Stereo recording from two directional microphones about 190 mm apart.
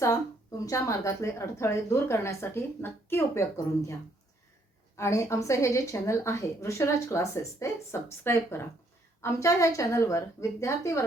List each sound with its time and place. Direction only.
0.6 s a woman's voice: 15° left (ahead or behind)
4.9 s a woman's voice: 15° left (ahead or behind)